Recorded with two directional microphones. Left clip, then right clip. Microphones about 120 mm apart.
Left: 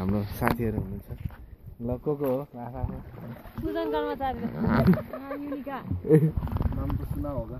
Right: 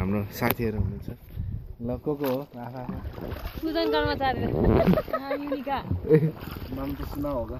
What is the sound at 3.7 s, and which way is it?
A man's voice, 10° left (ahead or behind).